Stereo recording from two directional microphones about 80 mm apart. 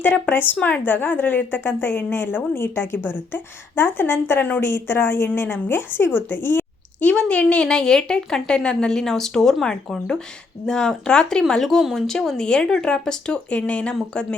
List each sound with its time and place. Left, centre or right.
0.0 s a woman's voice: left
6.1 s a sound: left
7.1 s speech: centre